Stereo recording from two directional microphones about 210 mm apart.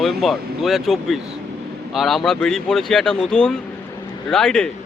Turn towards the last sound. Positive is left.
turn(degrees=5)  # may be behind; listen again after turning